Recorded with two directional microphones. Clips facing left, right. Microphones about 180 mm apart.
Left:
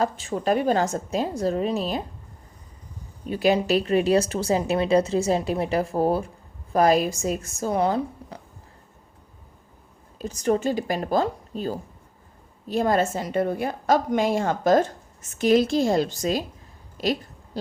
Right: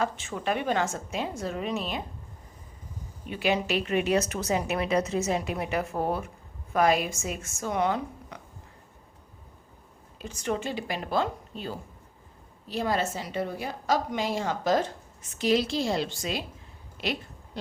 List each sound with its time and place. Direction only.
0.0 s speech: 35° left (ahead or behind)
3.2 s speech: 40° left (ahead or behind)
10.2 s a woman's voice: 40° left (ahead or behind)
17.0 s a sound: 40° left (ahead or behind)